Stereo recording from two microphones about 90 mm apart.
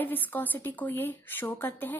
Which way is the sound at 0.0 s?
20° left (ahead or behind).